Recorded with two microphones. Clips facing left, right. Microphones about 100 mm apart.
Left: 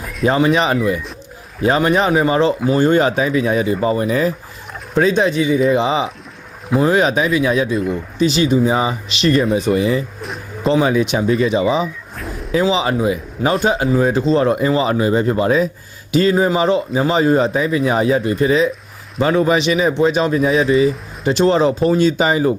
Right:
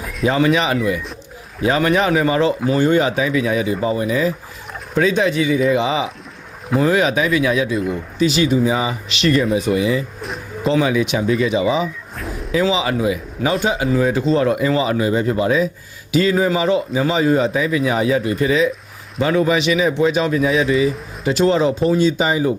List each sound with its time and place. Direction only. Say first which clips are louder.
0.3 s speech: left 1 dB; 30° left (ahead or behind)
2.7 s speech: left 2 dB; 40° left (ahead or behind)
4.9 s speech: left 2 dB; 35° left (ahead or behind)
10.2 s a sound: even; centre (ahead or behind)
10.7 s speech: left 2 dB; 35° left (ahead or behind)
12.1 s a sound: even; centre (ahead or behind)
12.6 s speech: left 2 dB; 30° left (ahead or behind)
21.8 s speech: left 2 dB; 55° left (ahead or behind)